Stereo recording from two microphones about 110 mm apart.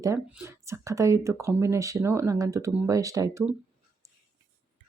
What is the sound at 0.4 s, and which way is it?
Speech, 25° right (ahead or behind).